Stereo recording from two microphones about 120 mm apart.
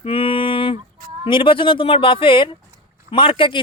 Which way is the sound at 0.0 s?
50° left (ahead or behind).